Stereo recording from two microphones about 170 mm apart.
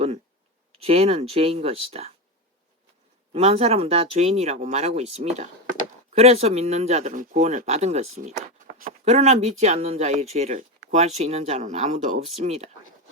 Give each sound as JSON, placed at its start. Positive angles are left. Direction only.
{"t": 0.7, "sound": "speech", "side_deg": -35}
{"t": 3.3, "sound": "speech", "side_deg": -35}